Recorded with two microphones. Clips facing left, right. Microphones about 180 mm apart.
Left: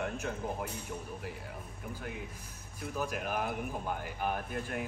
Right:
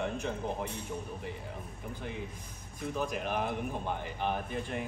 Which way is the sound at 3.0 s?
5° left (ahead or behind).